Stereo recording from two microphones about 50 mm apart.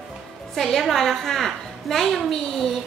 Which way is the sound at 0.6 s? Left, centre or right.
Centre.